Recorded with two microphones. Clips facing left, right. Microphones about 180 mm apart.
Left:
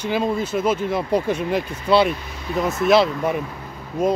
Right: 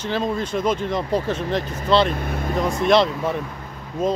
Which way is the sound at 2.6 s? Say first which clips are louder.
Left 1 dB; 5° left (ahead or behind).